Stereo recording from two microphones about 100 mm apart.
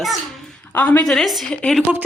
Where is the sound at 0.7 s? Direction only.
20° left (ahead or behind).